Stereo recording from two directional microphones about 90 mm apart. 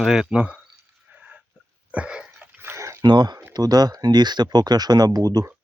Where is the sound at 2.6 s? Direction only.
30° right (ahead or behind).